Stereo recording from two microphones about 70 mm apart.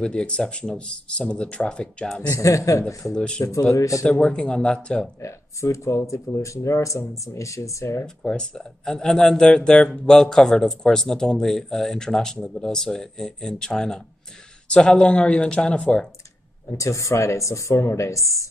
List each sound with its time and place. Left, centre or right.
0.0 s speech: centre
2.2 s speech: left
3.2 s speech: centre
3.7 s speech: left
4.0 s speech: centre
5.2 s speech: left
8.2 s speech: centre
16.7 s speech: left